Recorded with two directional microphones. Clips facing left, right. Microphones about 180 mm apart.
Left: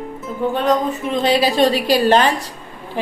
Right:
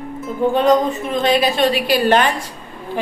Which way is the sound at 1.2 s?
30° left (ahead or behind).